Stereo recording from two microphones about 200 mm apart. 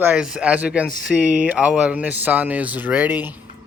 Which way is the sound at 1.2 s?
40° right (ahead or behind).